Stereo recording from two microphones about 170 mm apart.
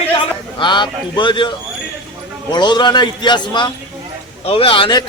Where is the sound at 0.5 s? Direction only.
25° left (ahead or behind).